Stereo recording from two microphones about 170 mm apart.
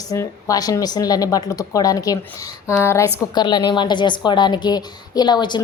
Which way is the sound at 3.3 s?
25° left (ahead or behind).